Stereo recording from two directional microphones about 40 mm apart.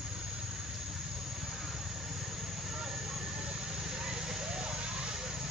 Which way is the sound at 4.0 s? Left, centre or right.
Centre.